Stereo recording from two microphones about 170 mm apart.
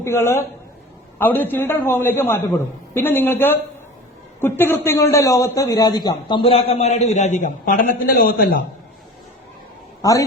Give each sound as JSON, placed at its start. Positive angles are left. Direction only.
{"t": 0.0, "sound": "a man's voice", "side_deg": 15}
{"t": 10.0, "sound": "a woman's voice", "side_deg": 20}